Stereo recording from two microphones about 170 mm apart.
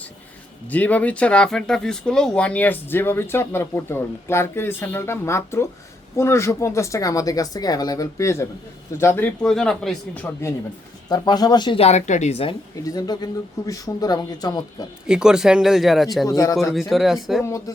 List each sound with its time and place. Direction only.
0.7 s speech: 10° left (ahead or behind)
11.1 s speech: 25° left (ahead or behind)
12.8 s speech: 20° left (ahead or behind)
15.0 s speech: 5° right (ahead or behind)
16.2 s speech: 20° left (ahead or behind)
16.9 s speech: centre (ahead or behind)
17.4 s speech: 15° left (ahead or behind)